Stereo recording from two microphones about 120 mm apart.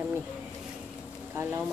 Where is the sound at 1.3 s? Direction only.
20° right (ahead or behind).